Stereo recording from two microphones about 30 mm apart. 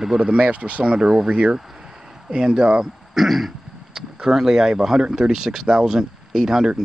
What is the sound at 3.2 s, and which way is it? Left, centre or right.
Throat clearing, centre.